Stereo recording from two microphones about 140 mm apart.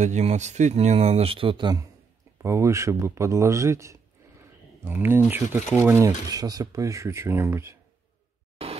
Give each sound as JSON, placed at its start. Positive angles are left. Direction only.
{"t": 0.0, "sound": "speech", "side_deg": -55}